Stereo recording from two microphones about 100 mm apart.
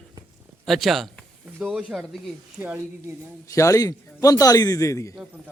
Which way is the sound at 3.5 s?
30° left (ahead or behind).